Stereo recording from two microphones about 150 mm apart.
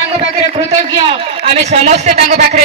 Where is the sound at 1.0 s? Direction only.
40° right (ahead or behind).